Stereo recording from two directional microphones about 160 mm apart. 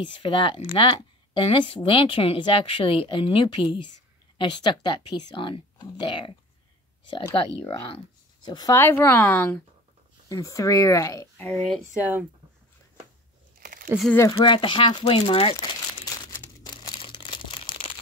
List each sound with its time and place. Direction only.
0.0 s speech: 30° left (ahead or behind)
8.5 s speech: 25° left (ahead or behind)
11.4 s speech: 5° left (ahead or behind)
12.0 s speech: 10° right (ahead or behind)
13.6 s a sound: 55° right (ahead or behind)
14.3 s speech: 30° left (ahead or behind)
16.3 s crumpling: 25° left (ahead or behind)